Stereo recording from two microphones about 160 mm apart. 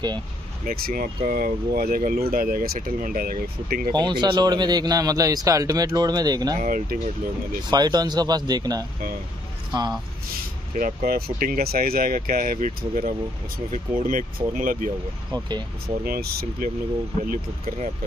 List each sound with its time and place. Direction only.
0.7 s speech: 60° right (ahead or behind)
3.9 s speech: 30° right (ahead or behind)
6.6 s speech: 60° right (ahead or behind)
7.7 s speech: 25° right (ahead or behind)
10.8 s speech: 65° right (ahead or behind)
15.3 s speech: 25° right (ahead or behind)
16.0 s speech: 70° right (ahead or behind)